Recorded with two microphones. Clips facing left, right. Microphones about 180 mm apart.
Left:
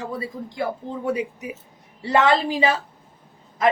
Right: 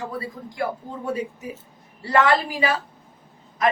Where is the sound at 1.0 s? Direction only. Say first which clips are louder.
Left 2 dB; 15° left (ahead or behind).